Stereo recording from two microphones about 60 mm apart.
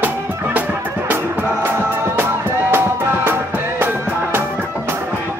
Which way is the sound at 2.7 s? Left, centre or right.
Right.